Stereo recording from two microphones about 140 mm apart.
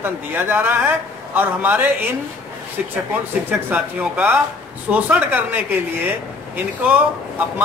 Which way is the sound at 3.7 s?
10° right (ahead or behind).